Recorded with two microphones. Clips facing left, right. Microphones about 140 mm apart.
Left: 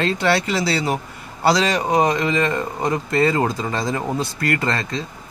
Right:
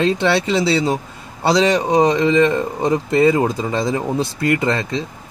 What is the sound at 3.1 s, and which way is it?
Speech, 15° right (ahead or behind).